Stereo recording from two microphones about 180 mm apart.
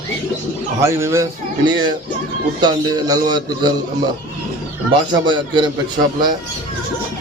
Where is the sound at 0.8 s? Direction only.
15° right (ahead or behind).